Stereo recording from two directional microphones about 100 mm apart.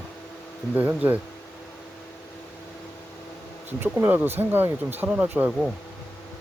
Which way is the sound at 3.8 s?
20° right (ahead or behind).